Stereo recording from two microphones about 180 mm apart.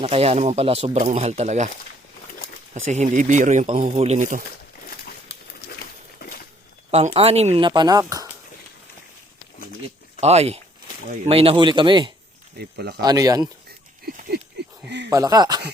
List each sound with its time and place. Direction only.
0.0 s speech: 35° right (ahead or behind)
2.9 s speech: 45° right (ahead or behind)
3.7 s speech: 30° right (ahead or behind); by 4.4 s 45° right (ahead or behind)
4.9 s a sound: 55° left (ahead or behind)
6.9 s speech: 35° right (ahead or behind)
10.2 s speech: 35° right (ahead or behind)
12.5 s speech: 65° right (ahead or behind)
13.0 s speech: 20° right (ahead or behind)
13.7 s a sound: 60° right (ahead or behind)
14.8 s speech: 75° right (ahead or behind)
15.1 s speech: 20° right (ahead or behind)